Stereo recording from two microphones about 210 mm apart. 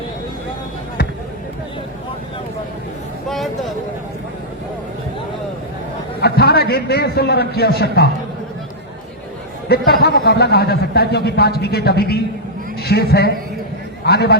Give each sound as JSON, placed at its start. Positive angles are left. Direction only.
{"t": 3.2, "sound": "a sound", "side_deg": 0}
{"t": 6.1, "sound": "a man's voice", "side_deg": 50}
{"t": 9.6, "sound": "a man's voice", "side_deg": 50}